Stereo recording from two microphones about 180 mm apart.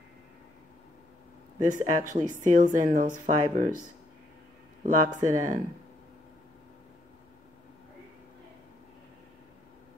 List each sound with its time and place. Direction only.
1.6 s a woman's voice: 45° right (ahead or behind)
4.8 s a woman's voice: 45° right (ahead or behind)